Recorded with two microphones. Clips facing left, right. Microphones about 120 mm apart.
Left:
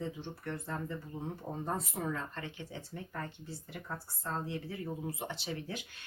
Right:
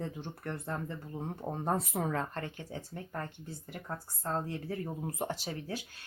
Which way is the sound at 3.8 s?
45° right (ahead or behind).